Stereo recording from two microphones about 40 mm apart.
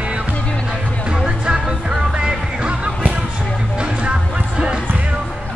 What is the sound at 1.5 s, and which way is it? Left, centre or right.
Music, centre.